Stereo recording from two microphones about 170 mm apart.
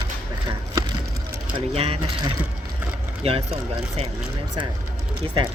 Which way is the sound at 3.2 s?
35° right (ahead or behind).